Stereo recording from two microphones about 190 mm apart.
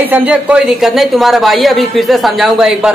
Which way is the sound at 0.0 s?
10° right (ahead or behind).